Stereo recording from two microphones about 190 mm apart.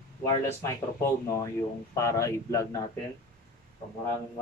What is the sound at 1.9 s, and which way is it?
Speech, 15° left (ahead or behind).